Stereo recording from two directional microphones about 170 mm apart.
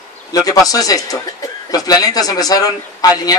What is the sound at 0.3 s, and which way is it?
A man's voice, 20° left (ahead or behind).